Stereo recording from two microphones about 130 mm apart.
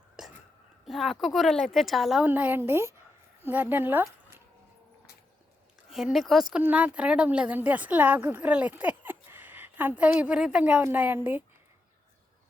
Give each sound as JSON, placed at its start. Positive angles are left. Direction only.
{"t": 0.2, "sound": "whispering", "side_deg": -5}
{"t": 0.9, "sound": "a woman's voice", "side_deg": 0}
{"t": 2.2, "sound": "a woman's voice", "side_deg": -15}
{"t": 5.9, "sound": "a woman's voice", "side_deg": 0}